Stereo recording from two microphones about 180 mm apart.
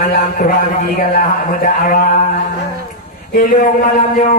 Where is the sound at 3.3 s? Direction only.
50° left (ahead or behind).